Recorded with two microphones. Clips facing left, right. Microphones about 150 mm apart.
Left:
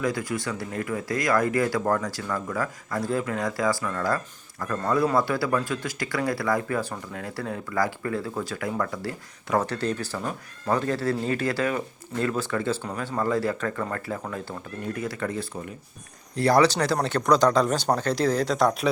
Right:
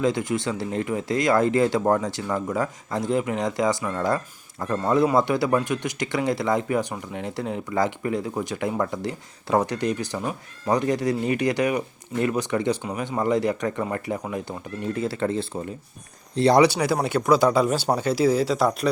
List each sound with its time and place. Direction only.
0.0 s speech: 20° right (ahead or behind)
14.9 s speech: 30° right (ahead or behind)
16.6 s speech: 10° right (ahead or behind)